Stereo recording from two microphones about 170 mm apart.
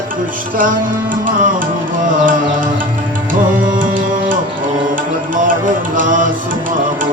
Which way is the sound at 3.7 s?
55° right (ahead or behind).